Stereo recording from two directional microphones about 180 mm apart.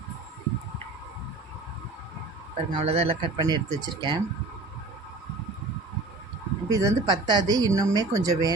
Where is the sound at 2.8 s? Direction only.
35° right (ahead or behind).